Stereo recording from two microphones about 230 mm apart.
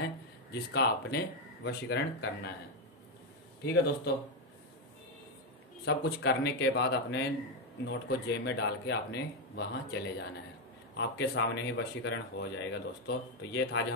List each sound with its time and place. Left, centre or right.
0.5 s speech: left
3.6 s speech: left
5.9 s speech: left